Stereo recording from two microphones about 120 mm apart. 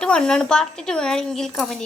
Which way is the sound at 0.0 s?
5° left (ahead or behind).